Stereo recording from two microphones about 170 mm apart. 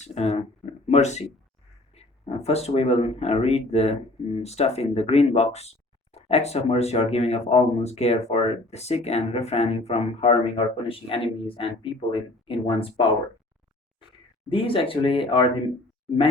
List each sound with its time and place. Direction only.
0.0 s speech: 40° left (ahead or behind)
14.5 s speech: 30° left (ahead or behind)